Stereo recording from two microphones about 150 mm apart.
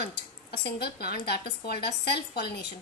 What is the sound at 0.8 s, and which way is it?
A woman's voice, 90° left.